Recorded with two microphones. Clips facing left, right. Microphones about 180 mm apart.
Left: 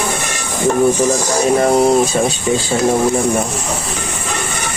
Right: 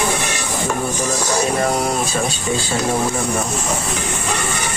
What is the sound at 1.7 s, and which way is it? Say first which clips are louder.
Speech: left 8 dB; 25° left (ahead or behind).